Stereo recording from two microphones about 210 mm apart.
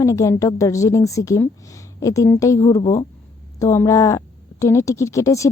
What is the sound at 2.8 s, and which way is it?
Speech, 30° left (ahead or behind).